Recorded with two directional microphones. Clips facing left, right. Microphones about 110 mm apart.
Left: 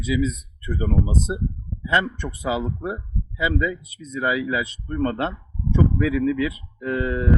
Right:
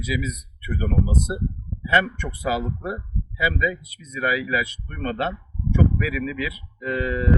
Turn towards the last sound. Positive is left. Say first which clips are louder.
# left 1 dB
turn(degrees=30)  # may be behind; listen again after turning